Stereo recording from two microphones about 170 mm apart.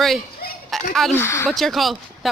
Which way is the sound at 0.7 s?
Centre (ahead or behind).